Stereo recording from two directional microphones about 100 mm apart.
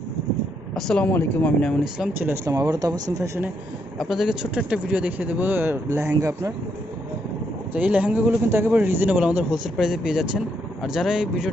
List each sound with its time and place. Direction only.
0.8 s speech: 5° left (ahead or behind)
2.1 s speech: 25° right (ahead or behind)
3.9 s speech: 5° right (ahead or behind); by 6.5 s 30° right (ahead or behind)
7.7 s speech: 15° right (ahead or behind)